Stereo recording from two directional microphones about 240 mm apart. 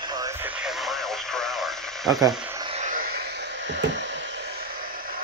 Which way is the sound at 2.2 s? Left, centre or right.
Centre.